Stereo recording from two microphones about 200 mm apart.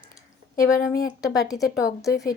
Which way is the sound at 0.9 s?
20° left (ahead or behind).